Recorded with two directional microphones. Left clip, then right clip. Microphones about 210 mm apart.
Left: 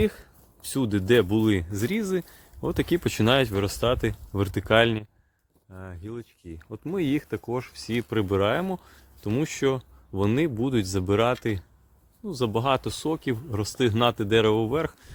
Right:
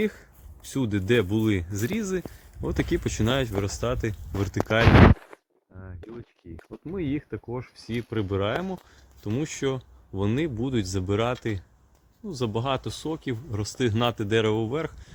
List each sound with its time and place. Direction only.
0.0 s speech: 10° left (ahead or behind)
5.7 s speech: 40° left (ahead or behind)
7.7 s speech: 35° left (ahead or behind)